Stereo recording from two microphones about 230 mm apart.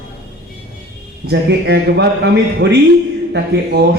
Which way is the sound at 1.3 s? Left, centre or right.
Right.